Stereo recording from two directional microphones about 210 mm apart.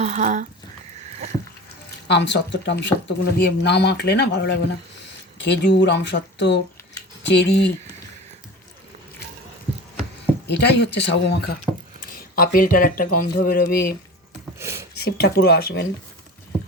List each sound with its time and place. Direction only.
0.0 s a sound: 35° right (ahead or behind)
2.0 s speech: 55° left (ahead or behind)
10.4 s speech: 55° left (ahead or behind)
12.4 s speech: 45° left (ahead or behind)
14.6 s a sound: 10° right (ahead or behind)
14.9 s speech: 50° left (ahead or behind)